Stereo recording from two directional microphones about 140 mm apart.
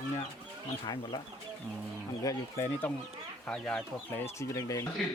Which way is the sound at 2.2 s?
15° left (ahead or behind).